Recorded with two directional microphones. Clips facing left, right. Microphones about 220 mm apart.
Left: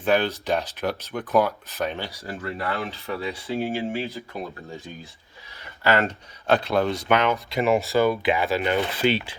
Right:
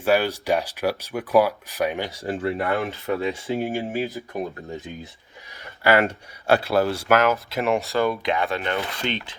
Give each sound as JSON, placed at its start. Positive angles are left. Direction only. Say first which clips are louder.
{"t": 0.0, "sound": "speech", "louder": "right 1 dB", "side_deg": -10}
{"t": 2.0, "sound": "speech", "louder": "right 7 dB", "side_deg": -25}
{"t": 5.8, "sound": "speech", "louder": "right 3 dB", "side_deg": -10}